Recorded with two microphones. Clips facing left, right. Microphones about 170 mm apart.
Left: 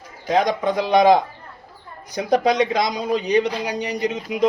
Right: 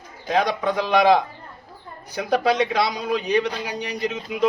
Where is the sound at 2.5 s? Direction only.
15° left (ahead or behind).